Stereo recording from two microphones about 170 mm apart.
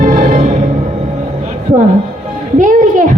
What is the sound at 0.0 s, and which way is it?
Music, 50° right (ahead or behind).